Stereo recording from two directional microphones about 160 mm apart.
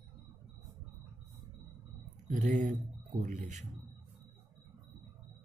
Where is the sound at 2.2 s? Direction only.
50° right (ahead or behind).